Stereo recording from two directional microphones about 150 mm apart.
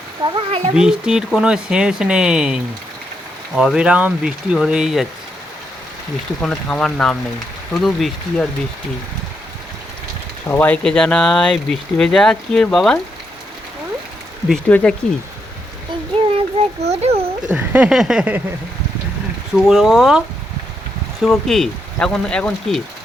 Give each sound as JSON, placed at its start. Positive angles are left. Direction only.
{"t": 0.3, "sound": "a child's voice", "side_deg": -40}
{"t": 0.8, "sound": "speech", "side_deg": -5}
{"t": 6.4, "sound": "speech", "side_deg": 5}
{"t": 10.5, "sound": "speech", "side_deg": 10}
{"t": 14.5, "sound": "speech", "side_deg": 5}
{"t": 16.6, "sound": "speech", "side_deg": -40}
{"t": 17.5, "sound": "a sound", "side_deg": -10}
{"t": 19.5, "sound": "speech", "side_deg": 0}